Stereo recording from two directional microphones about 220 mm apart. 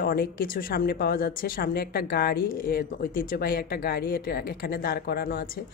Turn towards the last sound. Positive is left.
turn(degrees=45)  # may be behind; listen again after turning